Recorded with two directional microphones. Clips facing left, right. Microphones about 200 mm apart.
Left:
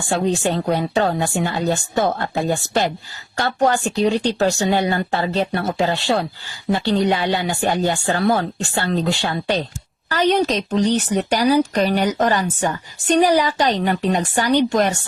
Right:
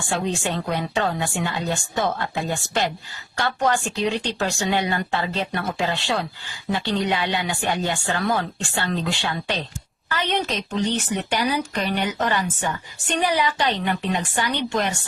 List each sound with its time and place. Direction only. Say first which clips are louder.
0.1 s a woman's voice: left 6 dB; 40° left (ahead or behind)